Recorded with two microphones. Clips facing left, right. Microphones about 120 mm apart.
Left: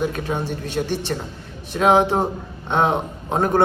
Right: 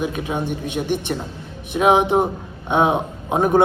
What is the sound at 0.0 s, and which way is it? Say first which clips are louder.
A man's voice: even; 15° right (ahead or behind).